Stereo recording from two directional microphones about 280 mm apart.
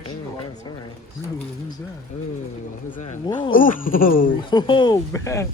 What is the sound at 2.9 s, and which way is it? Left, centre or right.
Speech, left.